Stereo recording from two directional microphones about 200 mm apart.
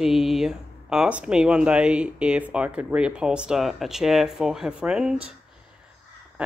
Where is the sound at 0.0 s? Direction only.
Centre (ahead or behind).